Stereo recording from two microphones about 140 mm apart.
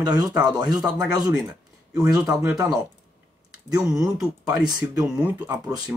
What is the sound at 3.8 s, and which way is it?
Speech, 5° right (ahead or behind).